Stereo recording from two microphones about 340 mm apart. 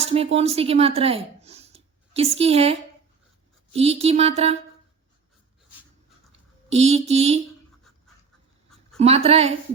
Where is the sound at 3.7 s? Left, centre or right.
Centre.